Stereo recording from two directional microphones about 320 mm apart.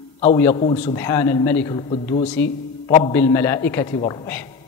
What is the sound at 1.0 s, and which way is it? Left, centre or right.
A man's voice, centre.